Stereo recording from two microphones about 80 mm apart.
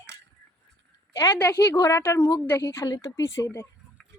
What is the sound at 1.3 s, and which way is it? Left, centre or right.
Speech, left.